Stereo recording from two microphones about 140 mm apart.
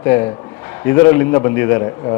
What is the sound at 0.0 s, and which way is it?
A man's voice, 20° left (ahead or behind).